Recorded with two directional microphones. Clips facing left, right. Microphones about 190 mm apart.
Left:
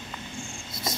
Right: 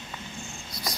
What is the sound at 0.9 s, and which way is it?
Cricket, 25° left (ahead or behind).